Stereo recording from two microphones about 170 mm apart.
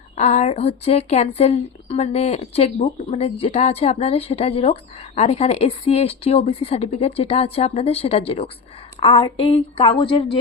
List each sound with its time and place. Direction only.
0.2 s a woman's voice: 40° left (ahead or behind)